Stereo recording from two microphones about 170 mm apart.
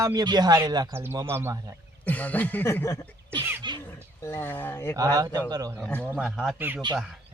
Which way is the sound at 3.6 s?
30° right (ahead or behind).